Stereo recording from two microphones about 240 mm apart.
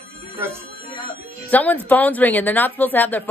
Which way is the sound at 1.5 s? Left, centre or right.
Centre.